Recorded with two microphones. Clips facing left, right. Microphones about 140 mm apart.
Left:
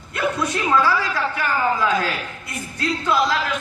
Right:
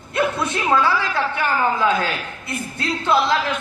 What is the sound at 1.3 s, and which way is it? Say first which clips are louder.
Speech: right 1 dB; 30° right (ahead or behind).